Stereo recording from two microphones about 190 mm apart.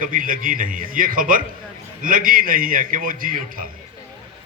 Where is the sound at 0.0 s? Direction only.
45° right (ahead or behind).